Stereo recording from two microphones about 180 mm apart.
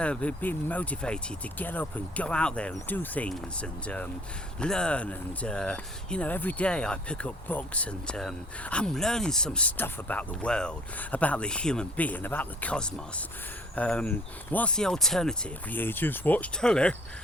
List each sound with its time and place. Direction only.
0.0 s speech: 5° left (ahead or behind)